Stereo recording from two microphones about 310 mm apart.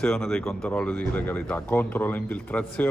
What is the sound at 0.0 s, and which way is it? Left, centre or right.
Speech, centre.